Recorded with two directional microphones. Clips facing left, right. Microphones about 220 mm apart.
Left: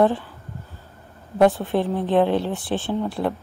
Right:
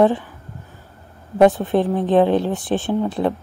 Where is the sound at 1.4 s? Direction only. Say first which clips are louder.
Right 3 dB; 15° right (ahead or behind).